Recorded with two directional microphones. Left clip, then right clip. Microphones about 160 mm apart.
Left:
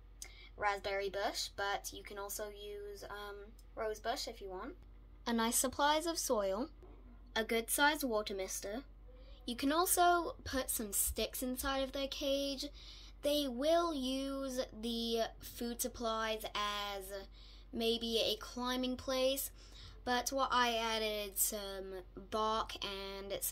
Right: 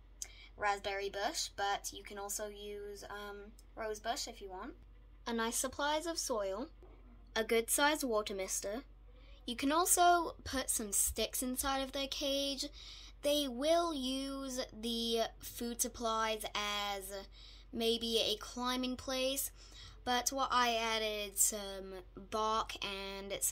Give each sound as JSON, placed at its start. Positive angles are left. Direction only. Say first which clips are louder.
{"t": 0.2, "sound": "speech", "louder": "even", "side_deg": 0}
{"t": 5.2, "sound": "a woman's voice", "louder": "left 2 dB", "side_deg": 15}
{"t": 7.3, "sound": "a woman's voice", "louder": "right 2 dB", "side_deg": -25}
{"t": 9.5, "sound": "a woman's voice", "louder": "right 1 dB", "side_deg": -15}